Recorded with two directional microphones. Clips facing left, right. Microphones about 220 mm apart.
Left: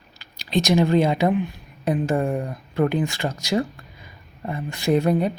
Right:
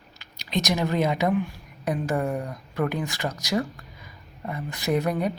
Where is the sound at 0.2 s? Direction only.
30° left (ahead or behind).